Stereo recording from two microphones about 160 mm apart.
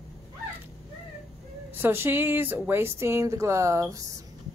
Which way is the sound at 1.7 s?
15° right (ahead or behind).